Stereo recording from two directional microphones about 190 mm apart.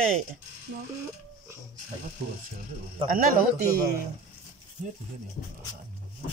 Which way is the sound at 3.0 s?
45° right (ahead or behind).